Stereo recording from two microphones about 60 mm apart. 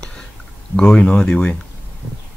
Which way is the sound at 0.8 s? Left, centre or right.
Centre.